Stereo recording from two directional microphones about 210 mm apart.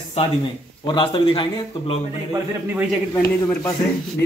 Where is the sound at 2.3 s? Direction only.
10° right (ahead or behind).